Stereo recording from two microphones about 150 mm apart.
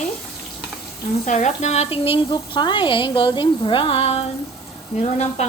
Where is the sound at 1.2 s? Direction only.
55° left (ahead or behind).